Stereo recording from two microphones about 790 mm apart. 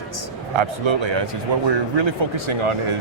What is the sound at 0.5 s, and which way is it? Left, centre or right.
Speech, right.